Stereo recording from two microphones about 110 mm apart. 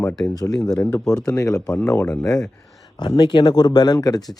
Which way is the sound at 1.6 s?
10° left (ahead or behind).